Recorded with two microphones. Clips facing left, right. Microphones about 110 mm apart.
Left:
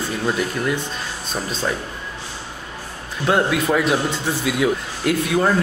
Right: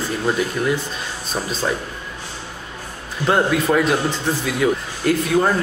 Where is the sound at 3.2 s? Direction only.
Centre (ahead or behind).